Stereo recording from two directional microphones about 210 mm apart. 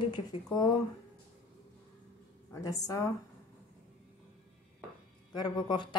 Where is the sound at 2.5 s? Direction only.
15° left (ahead or behind).